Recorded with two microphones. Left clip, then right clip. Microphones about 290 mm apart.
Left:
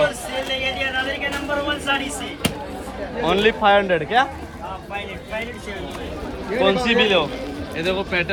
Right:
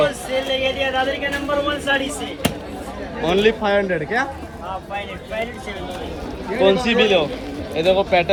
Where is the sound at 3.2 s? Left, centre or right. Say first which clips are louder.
Even; centre.